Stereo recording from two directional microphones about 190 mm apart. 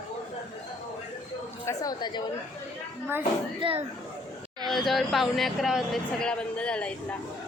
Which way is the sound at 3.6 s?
25° right (ahead or behind).